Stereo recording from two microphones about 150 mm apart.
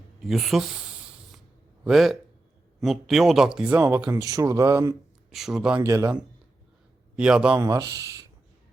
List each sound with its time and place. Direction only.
0.2 s snake: centre (ahead or behind)
1.8 s speech: centre (ahead or behind); by 4.9 s 20° right (ahead or behind)
5.3 s speech: centre (ahead or behind)
5.8 s speech: 20° right (ahead or behind)
7.2 s speech: 5° right (ahead or behind)
7.6 s speech: 25° right (ahead or behind)